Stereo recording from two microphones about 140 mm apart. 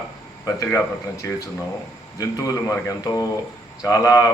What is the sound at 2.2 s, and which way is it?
Speech, 25° left (ahead or behind).